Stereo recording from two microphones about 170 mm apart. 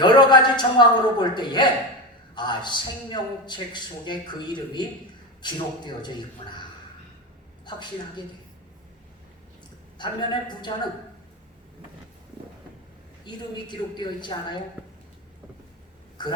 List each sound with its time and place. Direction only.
0.0 s a man's voice: 25° left (ahead or behind)
10.0 s a man's voice: 25° left (ahead or behind)
13.2 s a man's voice: 25° left (ahead or behind)
16.2 s a woman's voice: 25° left (ahead or behind)